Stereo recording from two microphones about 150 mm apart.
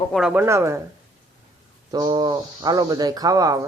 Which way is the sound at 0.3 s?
20° right (ahead or behind).